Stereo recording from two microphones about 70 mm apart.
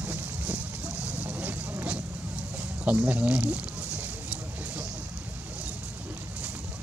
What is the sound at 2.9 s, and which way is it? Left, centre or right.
Speech, right.